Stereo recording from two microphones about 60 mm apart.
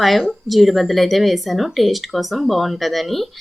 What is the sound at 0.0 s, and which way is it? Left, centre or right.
Speech, centre.